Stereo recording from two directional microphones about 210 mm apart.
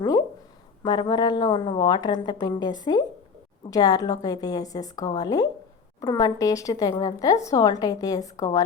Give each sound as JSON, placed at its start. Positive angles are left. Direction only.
{"t": 0.8, "sound": "speech", "side_deg": 20}